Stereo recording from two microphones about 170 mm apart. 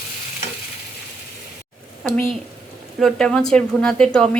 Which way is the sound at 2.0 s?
Centre (ahead or behind).